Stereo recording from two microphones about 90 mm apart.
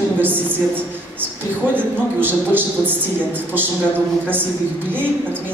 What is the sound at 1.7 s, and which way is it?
A man's voice, 20° right (ahead or behind).